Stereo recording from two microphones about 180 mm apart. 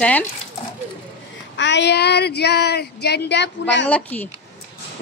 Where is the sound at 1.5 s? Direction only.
80° left.